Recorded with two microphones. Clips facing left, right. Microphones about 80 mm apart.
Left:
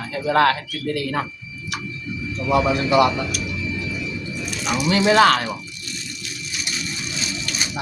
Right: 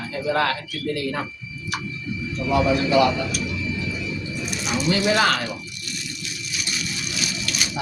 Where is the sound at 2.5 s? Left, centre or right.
Left.